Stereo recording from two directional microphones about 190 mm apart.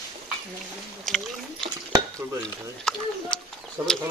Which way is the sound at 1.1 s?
5° left (ahead or behind).